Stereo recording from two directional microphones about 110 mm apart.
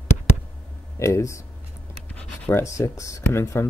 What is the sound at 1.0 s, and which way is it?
Speech, 30° left (ahead or behind).